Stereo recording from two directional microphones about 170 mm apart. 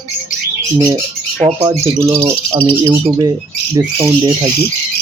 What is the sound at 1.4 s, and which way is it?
Speech, 25° right (ahead or behind).